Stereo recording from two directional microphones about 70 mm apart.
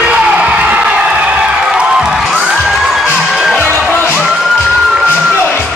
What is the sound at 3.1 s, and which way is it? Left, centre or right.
Music, centre.